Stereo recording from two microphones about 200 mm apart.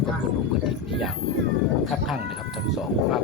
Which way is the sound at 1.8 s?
Centre (ahead or behind).